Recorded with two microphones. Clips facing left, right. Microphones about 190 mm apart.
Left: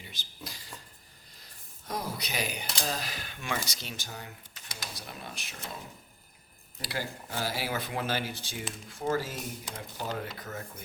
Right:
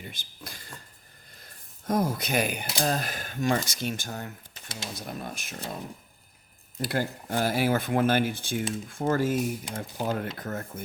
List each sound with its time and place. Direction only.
0.0 s a sound: 55° right (ahead or behind)
1.9 s speech: 50° right (ahead or behind)
6.8 s speech: 50° right (ahead or behind)